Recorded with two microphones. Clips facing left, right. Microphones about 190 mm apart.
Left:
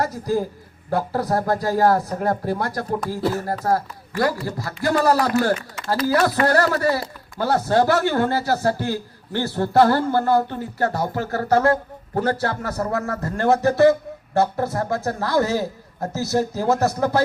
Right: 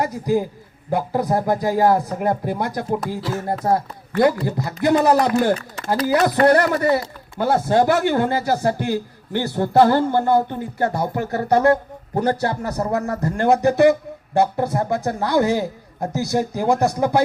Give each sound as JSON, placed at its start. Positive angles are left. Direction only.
{"t": 0.0, "sound": "a man's voice", "side_deg": -15}